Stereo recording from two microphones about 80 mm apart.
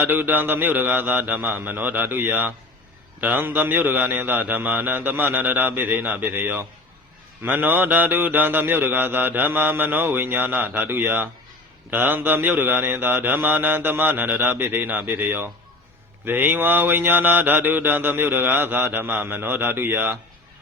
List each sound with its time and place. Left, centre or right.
0.0 s mantra: right